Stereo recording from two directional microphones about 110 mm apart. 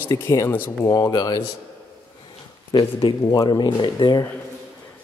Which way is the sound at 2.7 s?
35° left (ahead or behind).